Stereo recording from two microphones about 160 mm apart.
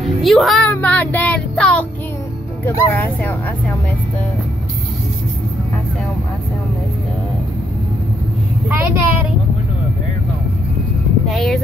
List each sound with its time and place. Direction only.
0.0 s music: centre (ahead or behind)
0.7 s child singing: 10° left (ahead or behind)
2.6 s speech: 10° left (ahead or behind)
8.6 s a woman's voice: 15° right (ahead or behind)
11.2 s speech: centre (ahead or behind)